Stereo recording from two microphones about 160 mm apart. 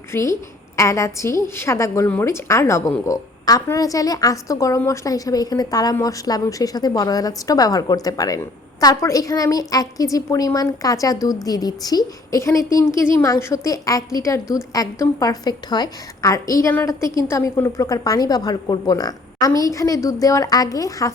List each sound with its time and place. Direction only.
0.1 s a woman's voice: 20° left (ahead or behind)